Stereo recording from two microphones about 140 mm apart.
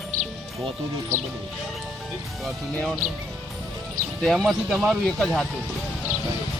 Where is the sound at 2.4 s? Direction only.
Centre (ahead or behind).